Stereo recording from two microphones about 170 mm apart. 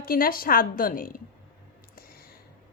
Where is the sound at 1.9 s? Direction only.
65° left (ahead or behind).